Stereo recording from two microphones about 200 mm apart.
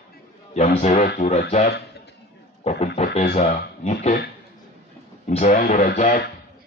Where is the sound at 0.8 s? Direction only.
35° left (ahead or behind).